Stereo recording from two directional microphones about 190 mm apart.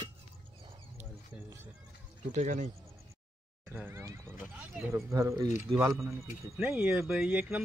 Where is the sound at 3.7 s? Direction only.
10° right (ahead or behind).